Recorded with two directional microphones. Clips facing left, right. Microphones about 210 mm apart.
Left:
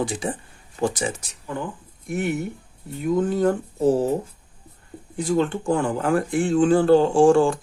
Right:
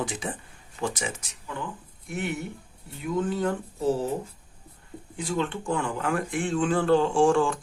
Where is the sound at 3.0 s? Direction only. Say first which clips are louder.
Left 6 dB; 40° left (ahead or behind).